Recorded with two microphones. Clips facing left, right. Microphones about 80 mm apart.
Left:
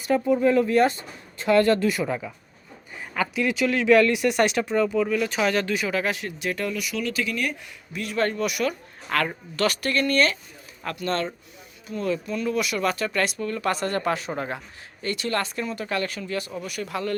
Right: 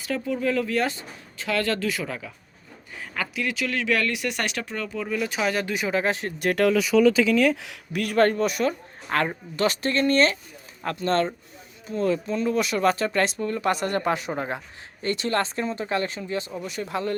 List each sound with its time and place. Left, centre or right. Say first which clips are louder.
0.1 s speech: left 6 dB; left
3.4 s speech: left 5 dB; centre
4.9 s speech: left 4 dB; centre; by 6.3 s right
6.4 s speech: right 7 dB; right
7.5 s speech: right 6 dB; right
8.0 s speech: right 4 dB; right